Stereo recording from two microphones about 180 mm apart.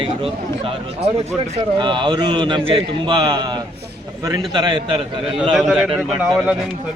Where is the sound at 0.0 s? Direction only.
30° right (ahead or behind).